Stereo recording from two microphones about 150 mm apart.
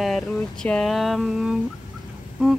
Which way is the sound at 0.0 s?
5° left (ahead or behind).